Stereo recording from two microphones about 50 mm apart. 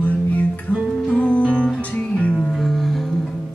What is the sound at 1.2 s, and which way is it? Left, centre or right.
Music, left.